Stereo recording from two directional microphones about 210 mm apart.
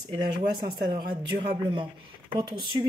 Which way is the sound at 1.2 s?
25° right (ahead or behind).